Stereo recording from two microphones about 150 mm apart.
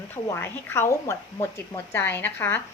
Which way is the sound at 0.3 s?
15° left (ahead or behind).